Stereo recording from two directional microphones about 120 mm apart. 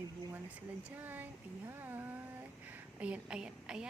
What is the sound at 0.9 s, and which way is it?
Speech, 15° right (ahead or behind).